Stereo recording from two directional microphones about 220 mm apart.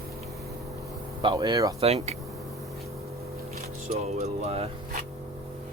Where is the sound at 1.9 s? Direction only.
30° right (ahead or behind).